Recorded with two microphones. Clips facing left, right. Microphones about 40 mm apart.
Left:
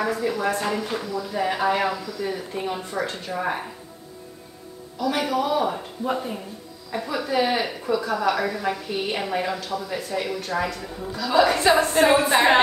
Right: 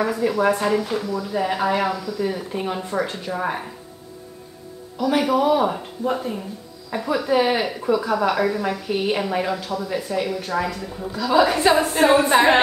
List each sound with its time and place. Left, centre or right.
0.0 s a woman's voice: centre
0.7 s a woman's voice: centre
4.9 s a woman's voice: centre
6.1 s speech: centre
6.9 s a woman's voice: right
9.2 s a woman's voice: centre